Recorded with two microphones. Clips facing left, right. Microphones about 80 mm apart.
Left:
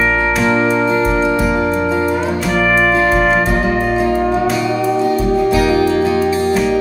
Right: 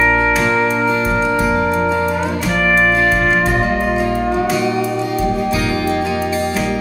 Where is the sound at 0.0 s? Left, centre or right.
Centre.